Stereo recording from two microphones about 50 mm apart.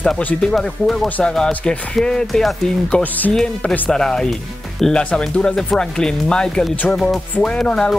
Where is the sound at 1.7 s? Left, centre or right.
Left.